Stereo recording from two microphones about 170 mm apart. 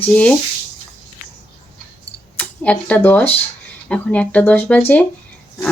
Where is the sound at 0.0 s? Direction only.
10° left (ahead or behind).